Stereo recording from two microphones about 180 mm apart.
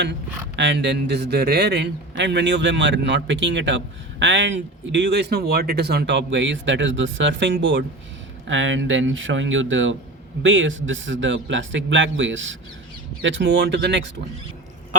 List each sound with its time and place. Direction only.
0.5 s a man's voice: 80° right
4.2 s a man's voice: 90° right; by 14.1 s 70° right (ahead or behind)